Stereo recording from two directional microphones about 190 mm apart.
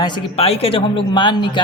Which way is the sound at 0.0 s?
30° left (ahead or behind).